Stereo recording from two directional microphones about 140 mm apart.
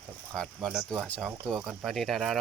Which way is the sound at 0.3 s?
Centre (ahead or behind).